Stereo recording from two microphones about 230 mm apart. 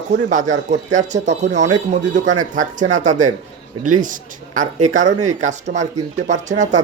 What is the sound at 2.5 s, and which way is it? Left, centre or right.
A man's voice, right.